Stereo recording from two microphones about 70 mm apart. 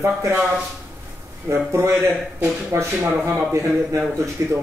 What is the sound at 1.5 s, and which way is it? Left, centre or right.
A man's voice, right.